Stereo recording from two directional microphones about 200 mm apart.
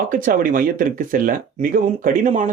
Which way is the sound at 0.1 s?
45° right (ahead or behind).